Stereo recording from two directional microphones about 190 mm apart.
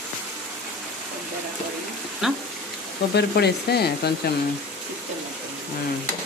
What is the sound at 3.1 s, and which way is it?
Speech, 60° left (ahead or behind).